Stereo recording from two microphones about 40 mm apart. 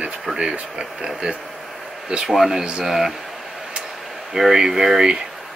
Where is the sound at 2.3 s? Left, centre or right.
Centre.